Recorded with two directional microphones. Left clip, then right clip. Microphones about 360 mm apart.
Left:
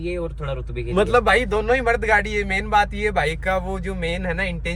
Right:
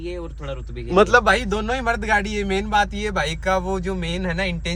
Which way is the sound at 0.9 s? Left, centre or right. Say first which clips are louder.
Right 3 dB; right.